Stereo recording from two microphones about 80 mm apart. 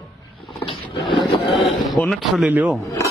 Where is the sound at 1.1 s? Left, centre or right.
Left.